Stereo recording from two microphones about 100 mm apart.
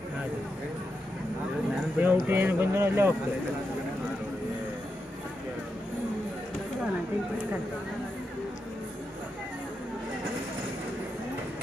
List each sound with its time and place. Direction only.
2.0 s speech: 20° right (ahead or behind)